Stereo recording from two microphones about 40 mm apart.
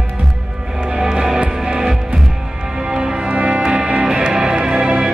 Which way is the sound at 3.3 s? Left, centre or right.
Right.